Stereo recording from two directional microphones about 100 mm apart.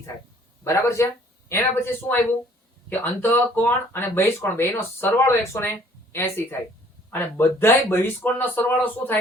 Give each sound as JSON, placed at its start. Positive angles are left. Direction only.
{"t": 0.6, "sound": "speech", "side_deg": 30}